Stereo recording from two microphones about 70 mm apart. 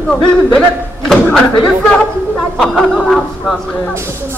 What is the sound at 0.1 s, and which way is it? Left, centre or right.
Speech, centre.